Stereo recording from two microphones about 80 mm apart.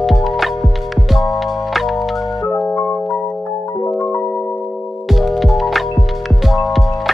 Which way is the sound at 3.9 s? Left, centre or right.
Left.